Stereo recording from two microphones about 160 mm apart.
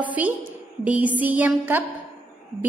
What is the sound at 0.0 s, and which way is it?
A woman's voice, 10° right (ahead or behind).